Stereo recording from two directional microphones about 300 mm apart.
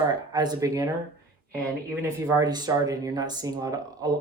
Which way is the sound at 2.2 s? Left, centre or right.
Centre.